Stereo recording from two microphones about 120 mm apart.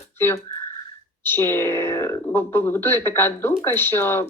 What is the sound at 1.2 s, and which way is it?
Speech, 20° left (ahead or behind).